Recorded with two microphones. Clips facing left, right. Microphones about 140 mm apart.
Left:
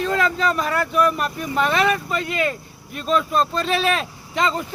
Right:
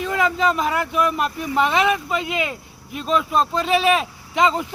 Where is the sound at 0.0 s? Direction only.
15° right (ahead or behind).